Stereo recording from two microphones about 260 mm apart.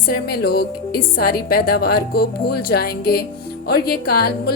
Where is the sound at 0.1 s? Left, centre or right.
Left.